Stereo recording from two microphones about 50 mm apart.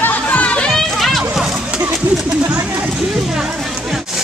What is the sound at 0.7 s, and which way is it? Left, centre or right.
Music, centre.